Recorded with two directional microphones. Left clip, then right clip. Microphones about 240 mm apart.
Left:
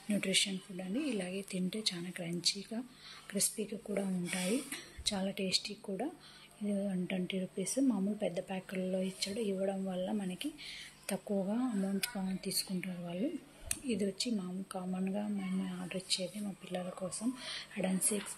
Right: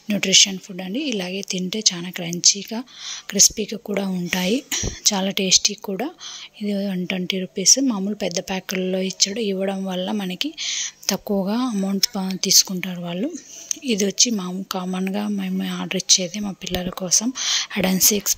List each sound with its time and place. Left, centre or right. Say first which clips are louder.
0.1 s a woman's voice: right 17 dB; right